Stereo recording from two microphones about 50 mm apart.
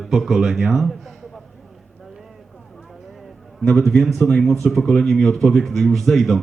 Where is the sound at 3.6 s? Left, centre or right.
Centre.